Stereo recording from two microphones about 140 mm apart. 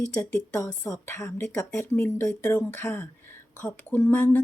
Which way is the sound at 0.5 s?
20° left (ahead or behind).